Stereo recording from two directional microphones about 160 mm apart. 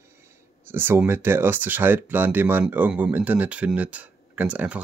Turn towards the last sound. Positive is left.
turn(degrees=-10)  # may be behind; listen again after turning